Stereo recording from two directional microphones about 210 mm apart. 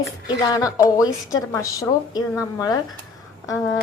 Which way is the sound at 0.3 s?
20° left (ahead or behind).